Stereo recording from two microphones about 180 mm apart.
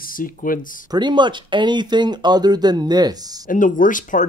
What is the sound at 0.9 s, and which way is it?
Speech, 25° right (ahead or behind).